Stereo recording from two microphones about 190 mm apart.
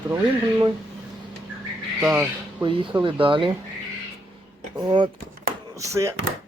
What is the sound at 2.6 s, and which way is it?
Speech, 25° right (ahead or behind).